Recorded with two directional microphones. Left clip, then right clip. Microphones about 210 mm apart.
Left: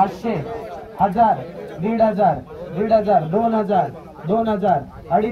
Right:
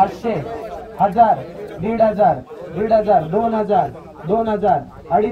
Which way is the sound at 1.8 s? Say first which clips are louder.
Right 2 dB; 20° left (ahead or behind).